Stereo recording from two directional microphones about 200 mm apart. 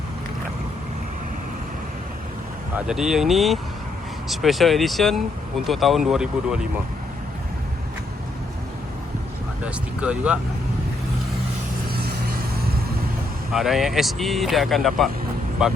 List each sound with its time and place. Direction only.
2.7 s speech: 5° right (ahead or behind)
9.6 s speech: 5° right (ahead or behind)
11.9 s vehicle: 50° right (ahead or behind)
13.5 s speech: centre (ahead or behind)